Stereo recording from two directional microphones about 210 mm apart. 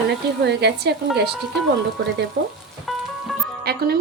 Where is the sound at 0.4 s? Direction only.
55° right (ahead or behind).